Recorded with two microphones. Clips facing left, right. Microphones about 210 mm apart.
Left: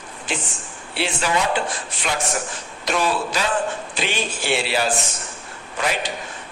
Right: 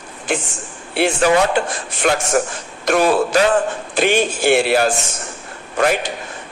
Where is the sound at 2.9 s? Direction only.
50° right (ahead or behind).